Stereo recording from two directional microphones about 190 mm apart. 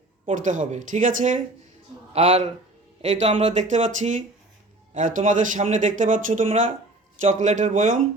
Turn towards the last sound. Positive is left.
turn(degrees=-40)  # may be behind; listen again after turning